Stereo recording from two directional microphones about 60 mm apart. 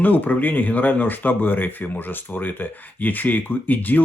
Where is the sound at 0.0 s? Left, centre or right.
Left.